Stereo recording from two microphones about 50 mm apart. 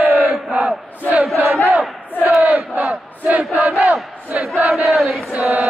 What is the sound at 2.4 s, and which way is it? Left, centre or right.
Crowd, right.